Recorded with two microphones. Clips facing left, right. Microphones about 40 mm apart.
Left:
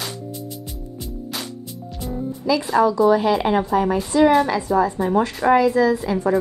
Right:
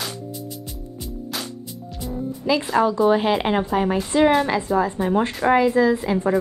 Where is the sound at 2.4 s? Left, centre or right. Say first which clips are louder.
Left 2 dB; right.